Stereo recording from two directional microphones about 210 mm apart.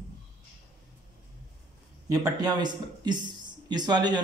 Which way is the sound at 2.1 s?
15° right (ahead or behind).